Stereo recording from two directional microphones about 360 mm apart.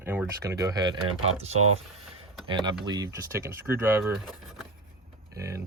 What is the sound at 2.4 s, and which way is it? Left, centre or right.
Speech, centre.